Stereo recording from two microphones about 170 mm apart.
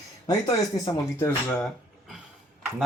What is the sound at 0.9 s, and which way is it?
Speech, 20° left (ahead or behind).